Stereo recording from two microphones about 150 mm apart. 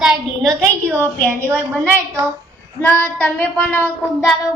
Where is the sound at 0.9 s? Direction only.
10° left (ahead or behind).